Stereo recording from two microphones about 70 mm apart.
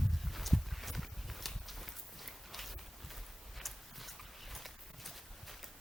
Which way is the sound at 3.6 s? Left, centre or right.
Centre.